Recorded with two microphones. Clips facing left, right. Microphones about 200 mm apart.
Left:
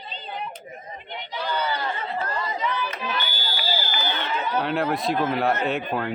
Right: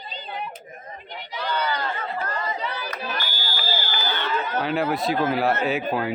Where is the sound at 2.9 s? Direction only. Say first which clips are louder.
Left 1 dB; 40° right (ahead or behind).